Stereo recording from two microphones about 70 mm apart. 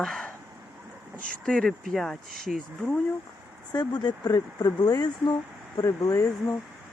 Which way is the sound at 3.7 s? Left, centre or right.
Left.